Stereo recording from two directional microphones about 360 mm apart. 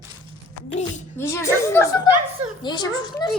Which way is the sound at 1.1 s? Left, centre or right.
Centre.